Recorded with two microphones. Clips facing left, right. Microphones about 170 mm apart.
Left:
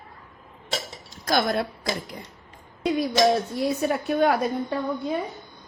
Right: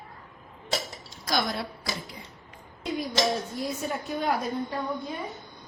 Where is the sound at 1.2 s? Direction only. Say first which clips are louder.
Left 6 dB; 55° left (ahead or behind).